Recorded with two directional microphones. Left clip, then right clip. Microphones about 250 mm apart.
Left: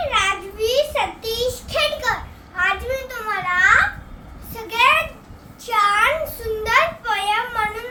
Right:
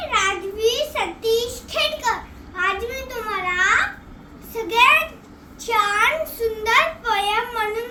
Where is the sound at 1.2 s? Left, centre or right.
Centre.